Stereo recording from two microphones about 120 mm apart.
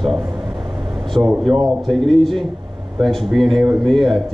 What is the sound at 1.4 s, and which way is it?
Speech, centre (ahead or behind).